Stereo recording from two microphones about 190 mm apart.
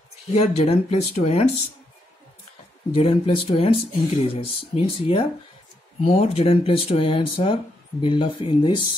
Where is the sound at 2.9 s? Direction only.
30° left (ahead or behind).